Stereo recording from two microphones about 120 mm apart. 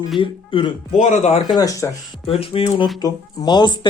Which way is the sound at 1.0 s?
80° left.